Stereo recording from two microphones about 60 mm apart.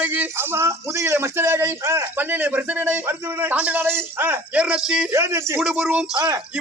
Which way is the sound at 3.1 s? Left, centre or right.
Right.